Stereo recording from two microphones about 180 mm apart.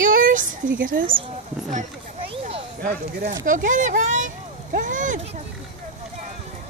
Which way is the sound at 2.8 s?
45° right (ahead or behind).